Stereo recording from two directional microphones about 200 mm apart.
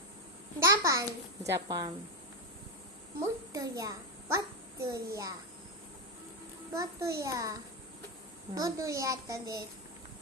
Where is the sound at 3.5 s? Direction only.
15° right (ahead or behind).